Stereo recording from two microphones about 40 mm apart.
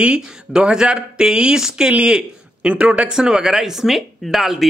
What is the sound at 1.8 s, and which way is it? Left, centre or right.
A man's voice, right.